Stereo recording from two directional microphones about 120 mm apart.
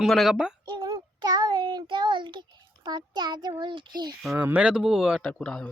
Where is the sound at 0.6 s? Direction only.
40° right (ahead or behind).